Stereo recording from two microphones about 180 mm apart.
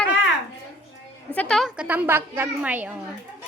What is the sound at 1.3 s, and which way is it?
A woman's voice, 5° left (ahead or behind).